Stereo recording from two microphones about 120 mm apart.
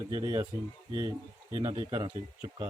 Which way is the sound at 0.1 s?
35° right (ahead or behind).